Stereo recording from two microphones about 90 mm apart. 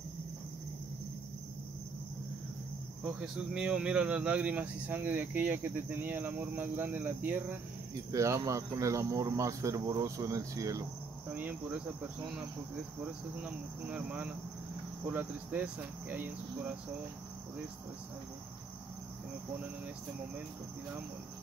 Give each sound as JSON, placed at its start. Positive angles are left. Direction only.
{"t": 3.0, "sound": "speech", "side_deg": -15}
{"t": 8.1, "sound": "speech", "side_deg": -35}
{"t": 13.4, "sound": "speech", "side_deg": -15}